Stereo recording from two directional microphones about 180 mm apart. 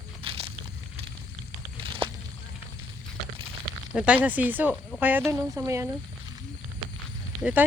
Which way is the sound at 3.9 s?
5° right (ahead or behind).